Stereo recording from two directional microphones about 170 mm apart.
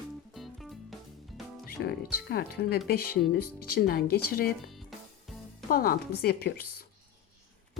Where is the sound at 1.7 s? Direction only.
65° left (ahead or behind).